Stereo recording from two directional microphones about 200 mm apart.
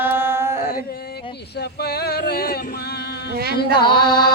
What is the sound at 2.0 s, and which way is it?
Music, 50° left (ahead or behind).